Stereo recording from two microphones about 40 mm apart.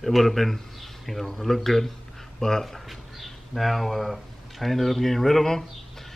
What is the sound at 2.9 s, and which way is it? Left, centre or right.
Speech, centre.